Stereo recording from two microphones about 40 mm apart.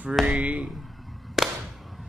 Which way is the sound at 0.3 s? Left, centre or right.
Right.